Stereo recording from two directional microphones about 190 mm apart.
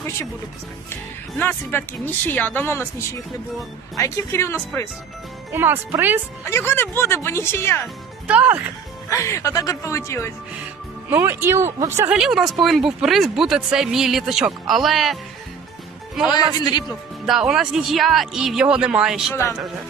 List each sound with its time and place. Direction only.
1.4 s speech: 10° left (ahead or behind)
5.5 s speech: 10° right (ahead or behind)
6.4 s speech: 15° left (ahead or behind)
8.3 s speech: 10° right (ahead or behind)
9.0 s speech: 15° left (ahead or behind)
11.1 s speech: 10° right (ahead or behind)
16.3 s a man's voice: 20° left (ahead or behind)
17.2 s speech: centre (ahead or behind)
19.3 s speech: 15° left (ahead or behind)